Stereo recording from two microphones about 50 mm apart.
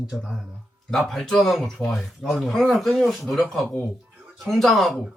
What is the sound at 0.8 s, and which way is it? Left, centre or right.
Speech, centre.